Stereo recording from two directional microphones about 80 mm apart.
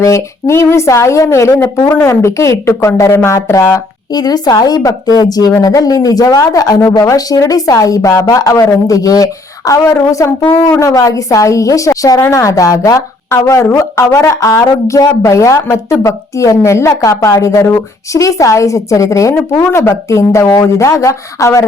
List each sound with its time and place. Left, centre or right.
0.0 s speech: left
4.1 s a woman's voice: left